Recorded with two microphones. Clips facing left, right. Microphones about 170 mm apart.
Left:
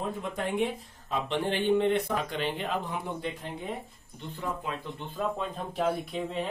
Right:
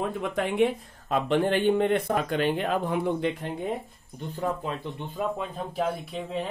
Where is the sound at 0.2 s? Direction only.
75° right (ahead or behind).